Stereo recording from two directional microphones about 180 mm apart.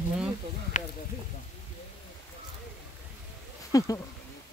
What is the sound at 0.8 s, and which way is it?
Speech, 45° left (ahead or behind).